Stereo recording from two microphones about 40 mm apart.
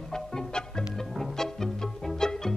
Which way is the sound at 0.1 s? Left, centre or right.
Centre.